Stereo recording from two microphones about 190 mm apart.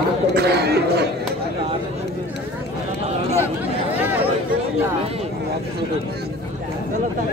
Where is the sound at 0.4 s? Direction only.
60° right (ahead or behind).